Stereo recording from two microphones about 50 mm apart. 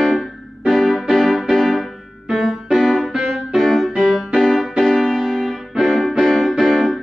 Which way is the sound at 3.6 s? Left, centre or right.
Centre.